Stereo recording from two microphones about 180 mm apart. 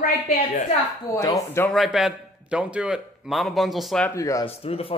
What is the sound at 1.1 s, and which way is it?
Speech, 20° left (ahead or behind).